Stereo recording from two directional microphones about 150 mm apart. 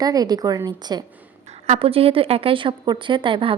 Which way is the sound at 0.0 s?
25° right (ahead or behind).